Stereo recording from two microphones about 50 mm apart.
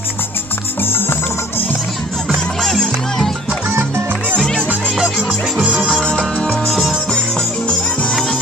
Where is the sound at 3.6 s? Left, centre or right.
Right.